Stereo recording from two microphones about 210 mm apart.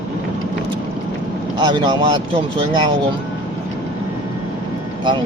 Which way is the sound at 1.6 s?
20° right (ahead or behind).